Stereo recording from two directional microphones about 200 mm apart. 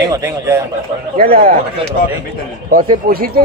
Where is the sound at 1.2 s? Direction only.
45° right (ahead or behind).